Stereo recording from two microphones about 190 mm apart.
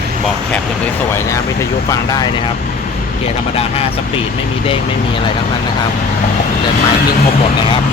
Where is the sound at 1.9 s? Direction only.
20° left (ahead or behind).